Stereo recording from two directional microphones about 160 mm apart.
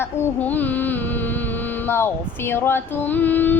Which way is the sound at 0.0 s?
10° left (ahead or behind).